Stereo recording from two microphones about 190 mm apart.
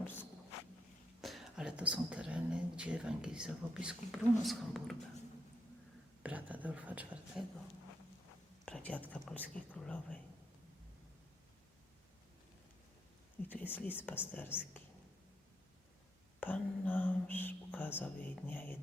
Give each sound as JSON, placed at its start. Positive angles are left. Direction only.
{"t": 1.2, "sound": "speech", "side_deg": 0}
{"t": 6.2, "sound": "speech", "side_deg": -10}
{"t": 8.6, "sound": "speech", "side_deg": 5}
{"t": 13.5, "sound": "speech", "side_deg": 10}
{"t": 16.4, "sound": "whispering", "side_deg": 10}